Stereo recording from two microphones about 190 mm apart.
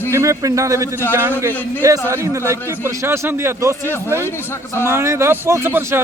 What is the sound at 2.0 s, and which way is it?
A man's voice, 15° right (ahead or behind).